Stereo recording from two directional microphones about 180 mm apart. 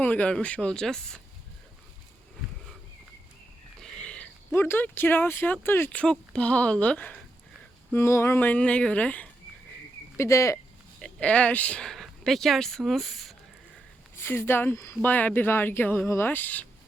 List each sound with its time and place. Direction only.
0.0 s speech: 10° left (ahead or behind)
3.8 s speech: 5° left (ahead or behind)
14.2 s speech: 15° left (ahead or behind)